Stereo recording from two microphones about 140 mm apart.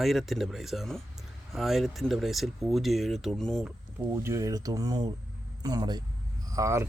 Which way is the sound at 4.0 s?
20° right (ahead or behind).